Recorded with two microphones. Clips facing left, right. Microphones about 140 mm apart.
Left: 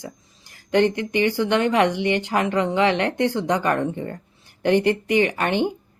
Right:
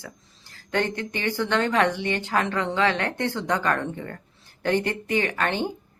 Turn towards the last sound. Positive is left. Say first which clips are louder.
# left 5 dB
turn(degrees=15)  # may be behind; listen again after turning